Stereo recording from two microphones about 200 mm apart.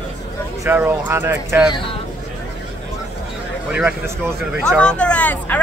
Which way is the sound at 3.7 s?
10° right (ahead or behind).